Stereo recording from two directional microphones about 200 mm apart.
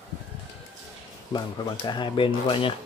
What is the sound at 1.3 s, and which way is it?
Speech, 20° left (ahead or behind).